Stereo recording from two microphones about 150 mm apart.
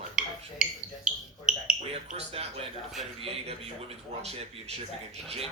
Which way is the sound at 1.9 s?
40° right (ahead or behind).